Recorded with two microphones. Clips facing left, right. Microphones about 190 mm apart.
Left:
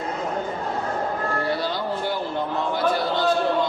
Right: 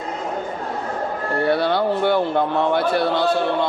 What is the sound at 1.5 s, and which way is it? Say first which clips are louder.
A man's voice: right 7 dB; 60° right (ahead or behind).